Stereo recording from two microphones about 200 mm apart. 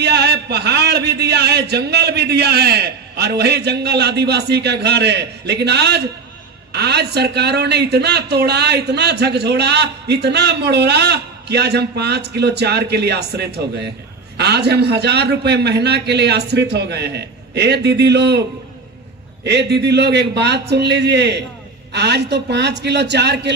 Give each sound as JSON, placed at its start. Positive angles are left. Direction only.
{"t": 0.0, "sound": "a man's voice", "side_deg": -55}
{"t": 19.4, "sound": "speech", "side_deg": -55}